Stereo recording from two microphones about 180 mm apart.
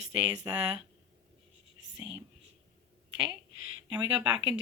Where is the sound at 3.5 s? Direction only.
90° right.